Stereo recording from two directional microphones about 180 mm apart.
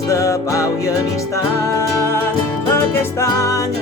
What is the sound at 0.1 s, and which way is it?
Music, 15° left (ahead or behind).